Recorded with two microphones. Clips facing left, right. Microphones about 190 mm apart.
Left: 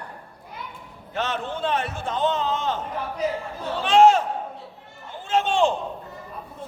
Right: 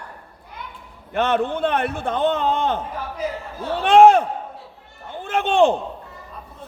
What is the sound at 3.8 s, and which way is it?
Speech, 55° right (ahead or behind).